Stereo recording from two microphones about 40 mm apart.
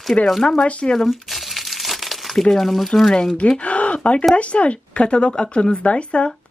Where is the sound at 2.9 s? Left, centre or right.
Centre.